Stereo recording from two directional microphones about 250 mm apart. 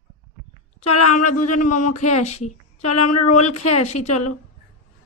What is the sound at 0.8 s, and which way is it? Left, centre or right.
Speech, left.